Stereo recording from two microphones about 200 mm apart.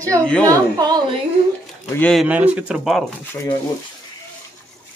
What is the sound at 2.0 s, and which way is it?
Speech, 5° left (ahead or behind).